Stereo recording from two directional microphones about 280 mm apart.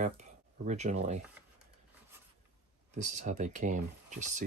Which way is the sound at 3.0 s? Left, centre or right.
Right.